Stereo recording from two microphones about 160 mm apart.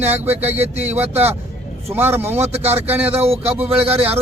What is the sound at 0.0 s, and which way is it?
Speech, 40° right (ahead or behind).